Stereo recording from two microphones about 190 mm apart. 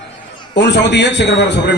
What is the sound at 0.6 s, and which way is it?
A man's voice, 65° left (ahead or behind).